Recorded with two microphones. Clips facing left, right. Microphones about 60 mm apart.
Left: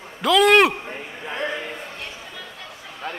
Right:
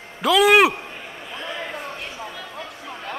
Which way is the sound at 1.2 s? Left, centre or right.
Left.